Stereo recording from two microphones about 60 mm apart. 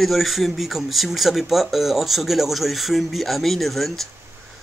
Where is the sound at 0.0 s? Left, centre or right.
Centre.